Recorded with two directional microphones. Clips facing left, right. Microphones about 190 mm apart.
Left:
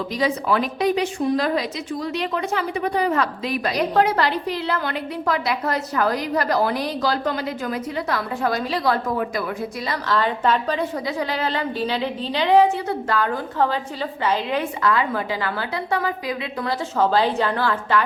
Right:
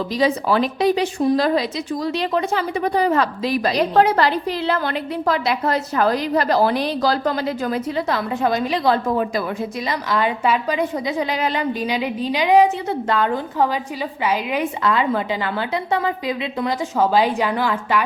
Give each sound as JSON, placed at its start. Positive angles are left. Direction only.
{"t": 0.2, "sound": "a woman's voice", "side_deg": -30}
{"t": 14.8, "sound": "a woman's voice", "side_deg": -25}